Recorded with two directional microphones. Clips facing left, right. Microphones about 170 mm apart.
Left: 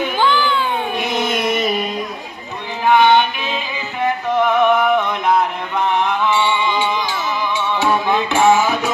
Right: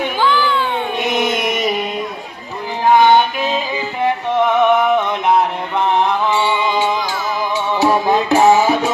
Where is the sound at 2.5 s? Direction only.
35° right (ahead or behind).